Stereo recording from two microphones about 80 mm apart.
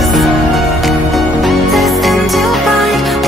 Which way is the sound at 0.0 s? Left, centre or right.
Centre.